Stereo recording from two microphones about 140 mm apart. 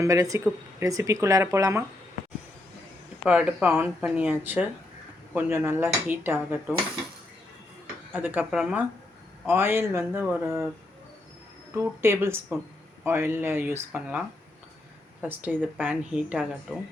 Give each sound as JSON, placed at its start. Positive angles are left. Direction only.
{"t": 0.0, "sound": "speech", "side_deg": -25}
{"t": 3.2, "sound": "speech", "side_deg": -10}
{"t": 8.1, "sound": "speech", "side_deg": -15}
{"t": 11.7, "sound": "speech", "side_deg": -20}